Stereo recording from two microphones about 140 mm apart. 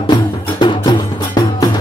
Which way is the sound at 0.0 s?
35° left (ahead or behind).